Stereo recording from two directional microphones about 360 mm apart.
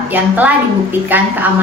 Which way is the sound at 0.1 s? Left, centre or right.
Centre.